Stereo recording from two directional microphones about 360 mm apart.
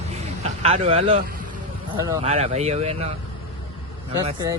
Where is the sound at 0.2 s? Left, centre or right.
Centre.